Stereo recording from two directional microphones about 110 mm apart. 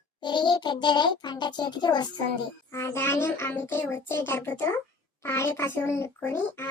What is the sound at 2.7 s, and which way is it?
Speech, 25° left (ahead or behind).